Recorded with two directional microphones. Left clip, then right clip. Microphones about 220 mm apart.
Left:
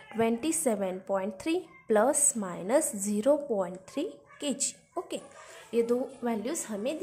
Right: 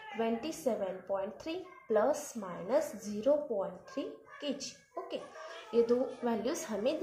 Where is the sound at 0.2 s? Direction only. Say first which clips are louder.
Left 6 dB; 35° left (ahead or behind).